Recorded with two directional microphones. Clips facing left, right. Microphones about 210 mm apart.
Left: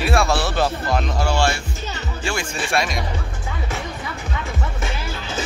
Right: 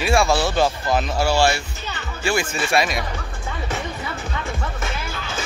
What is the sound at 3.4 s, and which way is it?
Music, centre (ahead or behind).